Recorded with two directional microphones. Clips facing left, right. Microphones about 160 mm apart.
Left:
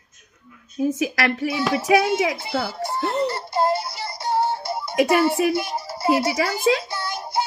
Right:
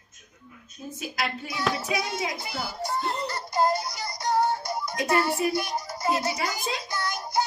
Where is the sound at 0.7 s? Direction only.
90° left.